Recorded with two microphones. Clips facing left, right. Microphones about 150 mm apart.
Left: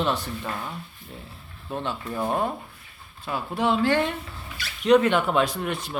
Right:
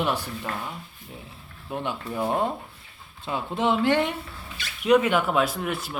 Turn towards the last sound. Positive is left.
turn(degrees=-5)  # may be behind; listen again after turning